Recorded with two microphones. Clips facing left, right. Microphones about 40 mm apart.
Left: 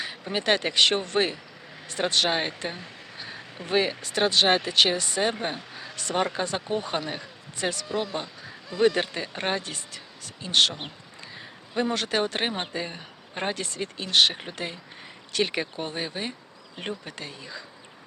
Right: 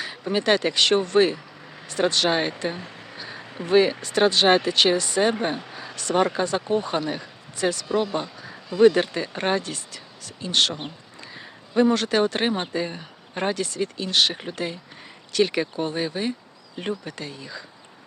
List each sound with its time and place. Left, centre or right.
0.0 s speech: centre
6.0 s speech: centre
7.9 s speech: centre